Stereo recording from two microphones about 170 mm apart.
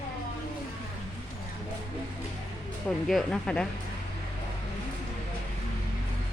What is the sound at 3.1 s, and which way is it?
Speech, 5° left (ahead or behind).